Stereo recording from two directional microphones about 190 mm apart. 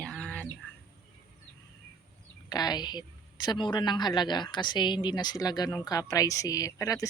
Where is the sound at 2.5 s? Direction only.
20° left (ahead or behind).